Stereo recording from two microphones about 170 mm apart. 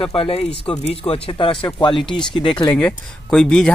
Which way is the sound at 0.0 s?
35° left (ahead or behind).